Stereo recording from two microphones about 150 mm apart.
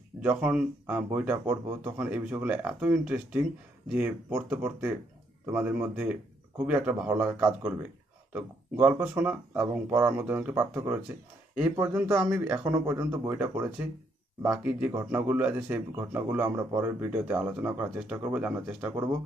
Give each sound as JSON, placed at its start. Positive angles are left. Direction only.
{"t": 0.2, "sound": "speech", "side_deg": -10}
{"t": 12.2, "sound": "speech", "side_deg": -5}
{"t": 12.7, "sound": "speech", "side_deg": -20}